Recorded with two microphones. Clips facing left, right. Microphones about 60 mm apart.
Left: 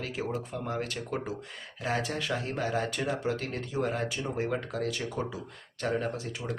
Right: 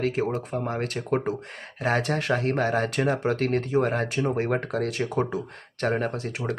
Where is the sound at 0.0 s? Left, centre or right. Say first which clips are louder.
Right 8 dB; right.